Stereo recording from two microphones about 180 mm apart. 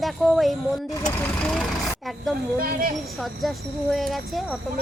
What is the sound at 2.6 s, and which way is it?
Speech, 55° right (ahead or behind).